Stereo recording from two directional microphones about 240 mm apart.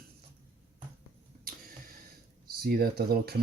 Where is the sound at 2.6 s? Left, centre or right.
Right.